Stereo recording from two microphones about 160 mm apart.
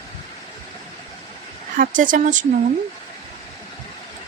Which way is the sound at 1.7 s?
55° right (ahead or behind).